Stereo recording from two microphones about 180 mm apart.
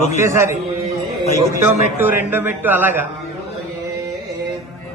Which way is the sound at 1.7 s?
10° right (ahead or behind).